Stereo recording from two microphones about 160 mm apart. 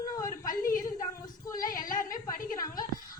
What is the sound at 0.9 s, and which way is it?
Child singing, 20° left (ahead or behind).